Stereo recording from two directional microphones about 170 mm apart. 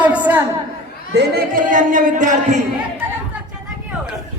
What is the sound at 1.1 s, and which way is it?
Speech, 60° right (ahead or behind).